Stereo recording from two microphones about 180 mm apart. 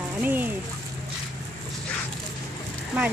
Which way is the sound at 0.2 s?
10° right (ahead or behind).